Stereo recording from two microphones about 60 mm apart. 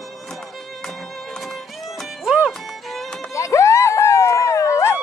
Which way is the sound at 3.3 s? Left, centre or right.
Left.